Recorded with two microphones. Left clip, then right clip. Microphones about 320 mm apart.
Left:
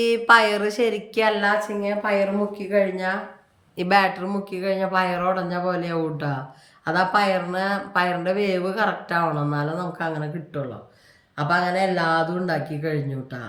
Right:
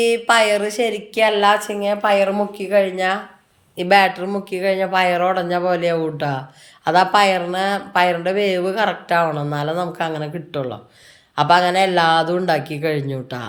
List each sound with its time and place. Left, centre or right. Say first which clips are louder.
0.0 s speech: right 1 dB; centre